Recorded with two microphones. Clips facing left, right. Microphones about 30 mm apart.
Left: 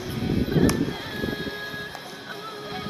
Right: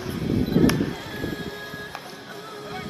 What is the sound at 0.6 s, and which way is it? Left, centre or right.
Music, centre.